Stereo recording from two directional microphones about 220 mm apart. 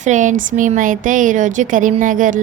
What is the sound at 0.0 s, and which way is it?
A woman's voice, 35° right (ahead or behind).